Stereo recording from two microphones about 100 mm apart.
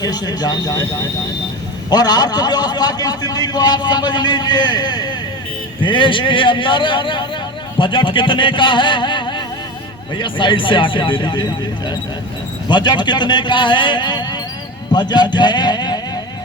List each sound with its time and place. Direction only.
0.0 s speech: 40° left (ahead or behind)
1.9 s a man's voice: 40° left (ahead or behind)